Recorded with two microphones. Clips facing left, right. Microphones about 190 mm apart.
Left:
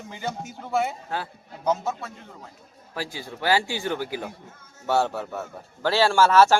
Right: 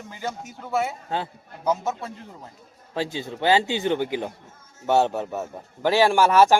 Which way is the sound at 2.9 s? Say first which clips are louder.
Right 5 dB; 25° right (ahead or behind).